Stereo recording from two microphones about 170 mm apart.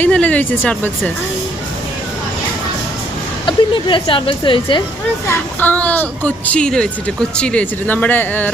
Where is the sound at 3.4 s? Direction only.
30° left (ahead or behind).